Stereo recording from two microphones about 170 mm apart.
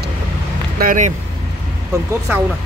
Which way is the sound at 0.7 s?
50° right (ahead or behind).